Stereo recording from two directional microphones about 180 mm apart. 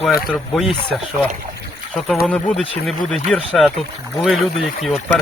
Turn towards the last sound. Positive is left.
turn(degrees=0)  # may be behind; listen again after turning